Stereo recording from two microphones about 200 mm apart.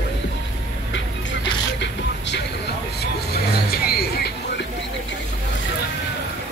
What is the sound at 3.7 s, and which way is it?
Music, 50° left (ahead or behind).